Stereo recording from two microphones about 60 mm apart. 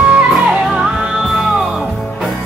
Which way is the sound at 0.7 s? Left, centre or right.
Centre.